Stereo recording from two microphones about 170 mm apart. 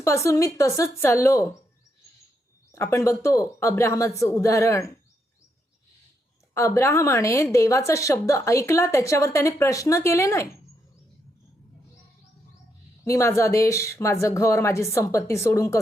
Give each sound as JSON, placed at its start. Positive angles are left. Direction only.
{"t": 0.0, "sound": "a woman's voice", "side_deg": 15}
{"t": 2.7, "sound": "a woman's voice", "side_deg": 15}
{"t": 6.5, "sound": "a woman's voice", "side_deg": 15}
{"t": 13.1, "sound": "a woman's voice", "side_deg": 15}